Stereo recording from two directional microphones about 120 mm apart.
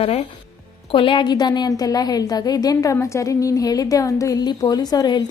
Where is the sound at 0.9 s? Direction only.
45° left (ahead or behind).